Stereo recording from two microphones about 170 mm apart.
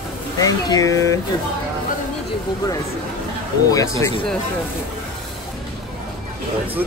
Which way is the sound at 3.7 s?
20° left (ahead or behind).